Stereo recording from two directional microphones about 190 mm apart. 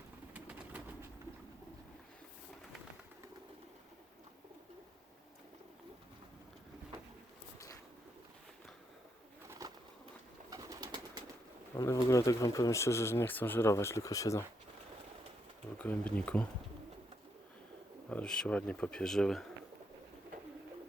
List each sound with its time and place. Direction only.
0.3 s bird: 10° right (ahead or behind)
9.5 s bird: 15° right (ahead or behind)
11.8 s speech: 15° left (ahead or behind)
15.8 s speech: 5° left (ahead or behind)
18.1 s speech: 5° left (ahead or behind)